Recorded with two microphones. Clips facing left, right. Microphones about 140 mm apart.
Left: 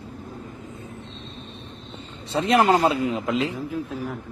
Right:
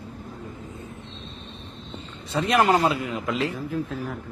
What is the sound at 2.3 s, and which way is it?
A man's voice, 25° left (ahead or behind).